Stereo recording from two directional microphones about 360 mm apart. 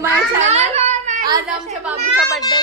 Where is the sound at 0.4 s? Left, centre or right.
Centre.